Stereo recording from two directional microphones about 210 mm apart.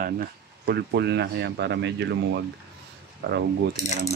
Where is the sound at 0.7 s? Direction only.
55° right (ahead or behind).